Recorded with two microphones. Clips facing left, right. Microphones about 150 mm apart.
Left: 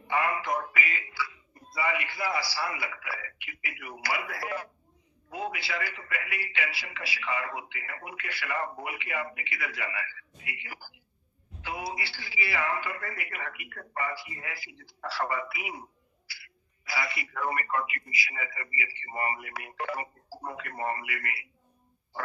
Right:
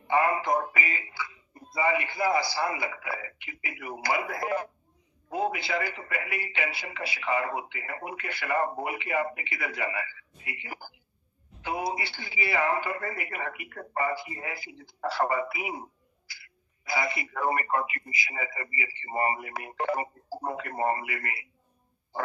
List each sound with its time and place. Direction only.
0.1 s a sound: 30° right (ahead or behind)
2.6 s speech: 25° right (ahead or behind)
4.1 s speech: 45° right (ahead or behind)
16.9 s speech: 40° right (ahead or behind)